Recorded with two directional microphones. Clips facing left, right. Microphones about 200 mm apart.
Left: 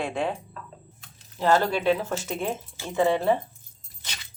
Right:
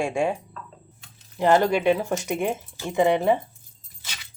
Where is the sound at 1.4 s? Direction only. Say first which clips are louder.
Right 3 dB; 15° right (ahead or behind).